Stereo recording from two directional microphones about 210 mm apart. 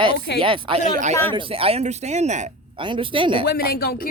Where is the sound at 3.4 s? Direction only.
45° left (ahead or behind).